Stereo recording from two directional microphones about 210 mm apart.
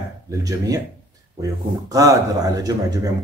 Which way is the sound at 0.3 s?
15° right (ahead or behind).